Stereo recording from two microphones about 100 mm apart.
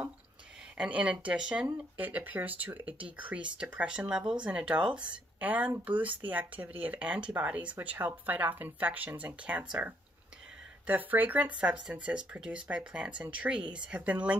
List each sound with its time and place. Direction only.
0.7 s speech: 10° right (ahead or behind)